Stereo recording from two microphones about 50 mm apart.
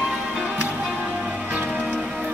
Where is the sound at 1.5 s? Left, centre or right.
Right.